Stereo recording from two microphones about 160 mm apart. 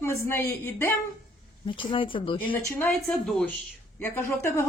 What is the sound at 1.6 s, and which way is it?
Speech, 30° left (ahead or behind).